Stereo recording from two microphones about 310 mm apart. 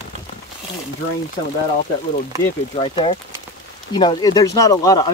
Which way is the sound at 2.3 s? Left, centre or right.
Centre.